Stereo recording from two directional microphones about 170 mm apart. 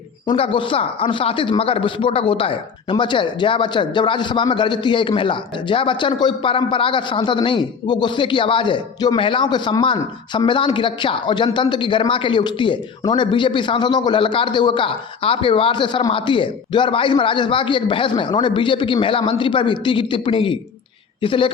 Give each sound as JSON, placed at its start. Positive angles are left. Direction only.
{"t": 0.3, "sound": "a woman's voice", "side_deg": 30}